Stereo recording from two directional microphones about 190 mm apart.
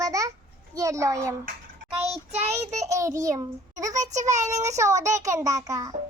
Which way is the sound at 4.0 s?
40° right (ahead or behind).